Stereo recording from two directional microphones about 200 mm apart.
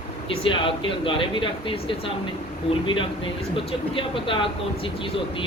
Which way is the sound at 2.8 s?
25° left (ahead or behind).